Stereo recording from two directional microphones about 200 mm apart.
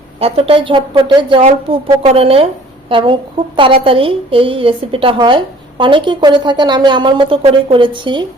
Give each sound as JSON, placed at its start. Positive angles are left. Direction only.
{"t": 0.2, "sound": "a woman's voice", "side_deg": -30}